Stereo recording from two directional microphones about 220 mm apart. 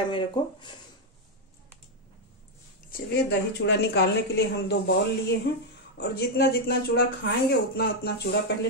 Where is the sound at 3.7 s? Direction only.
50° left (ahead or behind).